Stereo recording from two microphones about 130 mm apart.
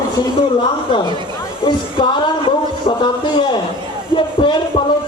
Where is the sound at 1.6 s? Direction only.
40° left (ahead or behind).